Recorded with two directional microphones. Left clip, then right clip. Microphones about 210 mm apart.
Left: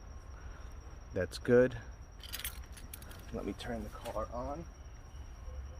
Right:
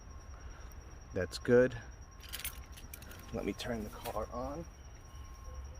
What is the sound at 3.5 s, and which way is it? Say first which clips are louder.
Speech: right 2 dB; 50° right (ahead or behind).